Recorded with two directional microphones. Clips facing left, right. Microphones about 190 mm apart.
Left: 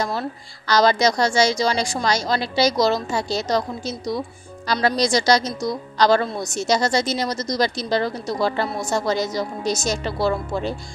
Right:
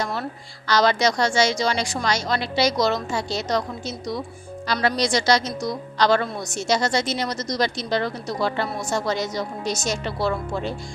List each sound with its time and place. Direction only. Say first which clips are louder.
0.7 s a woman's voice: left 2 dB; 40° left (ahead or behind)